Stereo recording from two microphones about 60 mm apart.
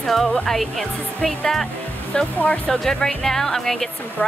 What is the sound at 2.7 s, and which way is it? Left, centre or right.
Speech, centre.